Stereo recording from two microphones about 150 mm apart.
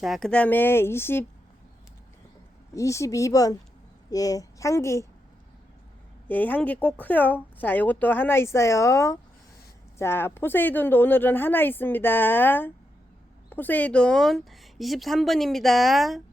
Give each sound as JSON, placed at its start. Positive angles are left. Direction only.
{"t": 0.0, "sound": "speech", "side_deg": 0}
{"t": 2.7, "sound": "a woman's voice", "side_deg": 20}
{"t": 6.2, "sound": "speech", "side_deg": 10}